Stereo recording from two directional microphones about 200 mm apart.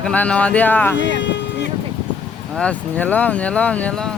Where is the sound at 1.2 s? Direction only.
60° left (ahead or behind).